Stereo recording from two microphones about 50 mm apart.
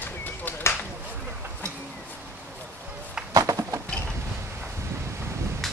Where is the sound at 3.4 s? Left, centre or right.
Right.